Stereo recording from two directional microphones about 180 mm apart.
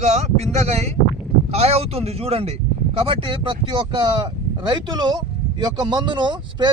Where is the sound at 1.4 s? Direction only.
35° right (ahead or behind).